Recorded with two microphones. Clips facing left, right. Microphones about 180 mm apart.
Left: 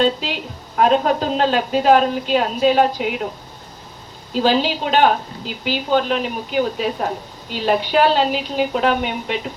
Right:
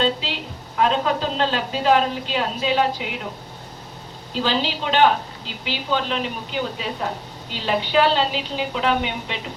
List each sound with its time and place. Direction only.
0.0 s a woman's voice: 45° left (ahead or behind)
4.4 s a woman's voice: 45° left (ahead or behind)